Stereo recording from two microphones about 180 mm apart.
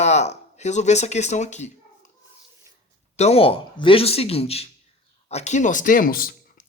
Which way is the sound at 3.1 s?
35° left (ahead or behind).